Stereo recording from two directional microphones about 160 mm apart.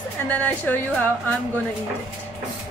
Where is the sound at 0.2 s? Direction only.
10° left (ahead or behind).